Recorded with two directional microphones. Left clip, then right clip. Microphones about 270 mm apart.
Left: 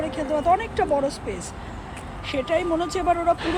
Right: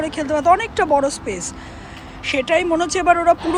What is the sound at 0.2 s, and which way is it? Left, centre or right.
Speech, centre.